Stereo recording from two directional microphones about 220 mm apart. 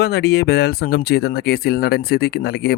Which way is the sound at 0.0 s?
45° left (ahead or behind).